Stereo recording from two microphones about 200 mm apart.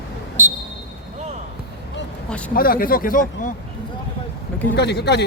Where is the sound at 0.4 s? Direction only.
35° right (ahead or behind).